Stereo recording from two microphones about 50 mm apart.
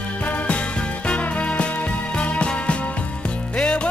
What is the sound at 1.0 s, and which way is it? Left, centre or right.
Music, left.